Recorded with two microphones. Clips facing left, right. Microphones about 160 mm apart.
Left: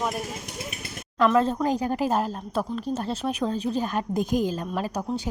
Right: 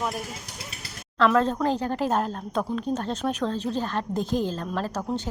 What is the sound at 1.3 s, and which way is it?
A woman's voice, 5° left (ahead or behind).